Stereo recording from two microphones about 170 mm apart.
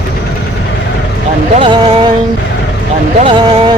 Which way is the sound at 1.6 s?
30° right (ahead or behind).